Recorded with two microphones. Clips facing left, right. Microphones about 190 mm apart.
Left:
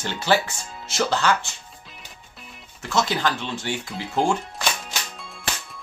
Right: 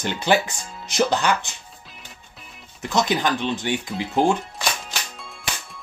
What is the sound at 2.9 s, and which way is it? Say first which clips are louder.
Speech: right 2 dB; 15° right (ahead or behind).